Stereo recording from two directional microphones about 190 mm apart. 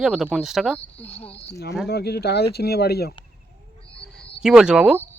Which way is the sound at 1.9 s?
60° left (ahead or behind).